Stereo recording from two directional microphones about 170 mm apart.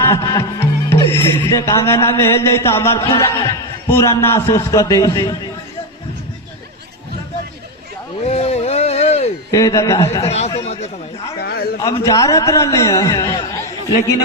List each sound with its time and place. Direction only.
0.0 s music: 15° left (ahead or behind)
1.5 s speech: 20° left (ahead or behind)
8.2 s a sound: 35° left (ahead or behind)
9.5 s a man's voice: 20° left (ahead or behind)
10.2 s a man's voice: 40° left (ahead or behind)
11.3 s a sound: 70° left (ahead or behind)
11.9 s a man's voice: 20° left (ahead or behind)